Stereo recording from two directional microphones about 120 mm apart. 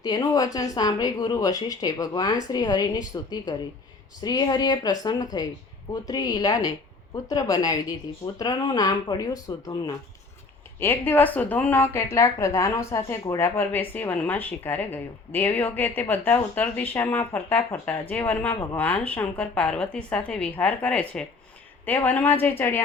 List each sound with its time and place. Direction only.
0.0 s speech: 35° left (ahead or behind)
10.8 s a woman's voice: 15° left (ahead or behind)